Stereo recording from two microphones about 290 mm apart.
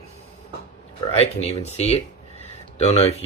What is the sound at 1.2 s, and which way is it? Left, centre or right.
Speech, left.